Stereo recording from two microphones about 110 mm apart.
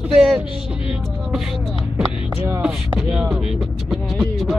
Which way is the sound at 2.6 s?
5° right (ahead or behind).